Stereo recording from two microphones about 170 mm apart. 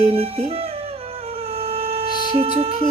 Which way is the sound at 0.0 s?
35° right (ahead or behind).